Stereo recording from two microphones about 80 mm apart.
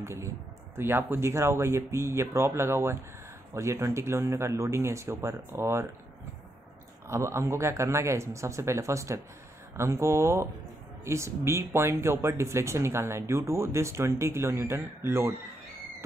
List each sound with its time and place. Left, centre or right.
0.7 s speech: right
7.1 s speech: right